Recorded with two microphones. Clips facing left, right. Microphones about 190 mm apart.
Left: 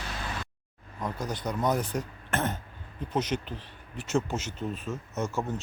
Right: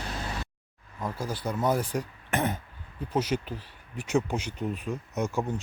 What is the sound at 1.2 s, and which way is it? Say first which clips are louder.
Speech: right 1 dB; 5° right (ahead or behind).